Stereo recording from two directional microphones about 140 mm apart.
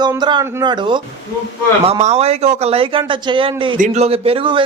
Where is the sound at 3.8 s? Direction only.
50° right (ahead or behind); by 4.6 s 35° right (ahead or behind).